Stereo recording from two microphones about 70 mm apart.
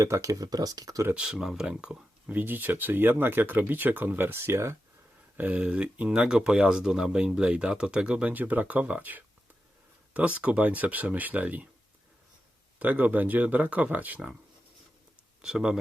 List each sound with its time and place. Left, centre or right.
0.0 s speech: right
0.4 s speech: right
1.1 s speech: centre; by 4.8 s right
5.4 s speech: centre
12.8 s speech: right
15.4 s speech: centre